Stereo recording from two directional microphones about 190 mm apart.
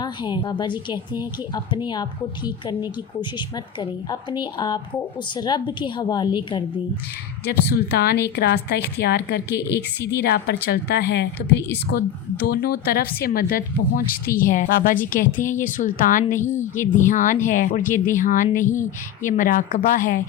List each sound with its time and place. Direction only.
0.0 s a woman's voice: 25° left (ahead or behind)
7.7 s a woman's voice: 55° left (ahead or behind)